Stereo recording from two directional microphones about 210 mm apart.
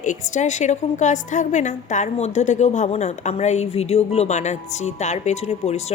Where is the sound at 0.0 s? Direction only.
35° left (ahead or behind).